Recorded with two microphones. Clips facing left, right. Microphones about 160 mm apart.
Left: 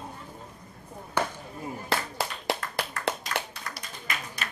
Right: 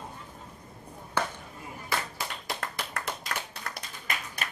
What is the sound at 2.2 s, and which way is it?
Clapping, 70° left (ahead or behind).